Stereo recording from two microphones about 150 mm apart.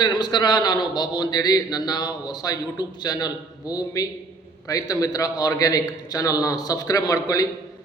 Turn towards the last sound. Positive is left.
turn(degrees=25)  # may be behind; listen again after turning